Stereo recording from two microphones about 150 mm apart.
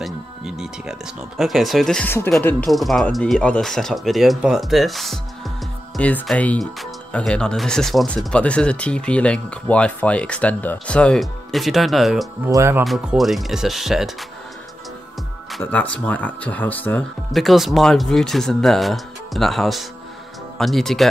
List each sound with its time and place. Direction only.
0.0 s speech: 5° right (ahead or behind)
12.4 s speech: 20° right (ahead or behind)
12.8 s speech: 5° right (ahead or behind)
15.6 s speech: 10° left (ahead or behind)
17.3 s speech: centre (ahead or behind)